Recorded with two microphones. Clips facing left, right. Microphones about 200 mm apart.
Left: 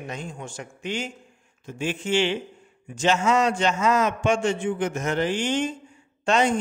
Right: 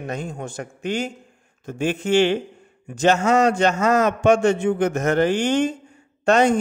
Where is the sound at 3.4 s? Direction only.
60° right (ahead or behind).